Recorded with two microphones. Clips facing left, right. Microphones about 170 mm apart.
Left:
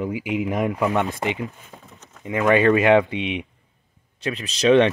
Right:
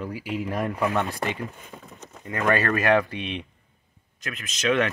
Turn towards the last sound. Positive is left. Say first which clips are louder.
# left 8 dB
turn(degrees=30)  # may be behind; listen again after turning